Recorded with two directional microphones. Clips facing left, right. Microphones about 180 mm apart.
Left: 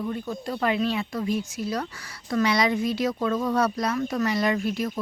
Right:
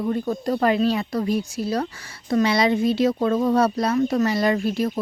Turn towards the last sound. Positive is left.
turn(degrees=-35)  # may be behind; listen again after turning